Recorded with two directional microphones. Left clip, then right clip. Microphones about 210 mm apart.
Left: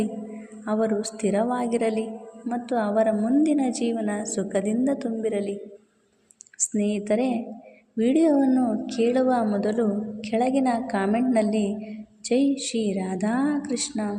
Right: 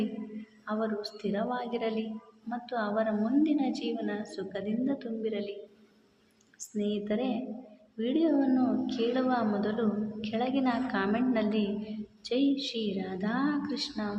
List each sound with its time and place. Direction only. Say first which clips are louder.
0.6 s a woman's voice: left 8 dB; 30° left (ahead or behind)
6.6 s a woman's voice: left 7 dB; 35° left (ahead or behind)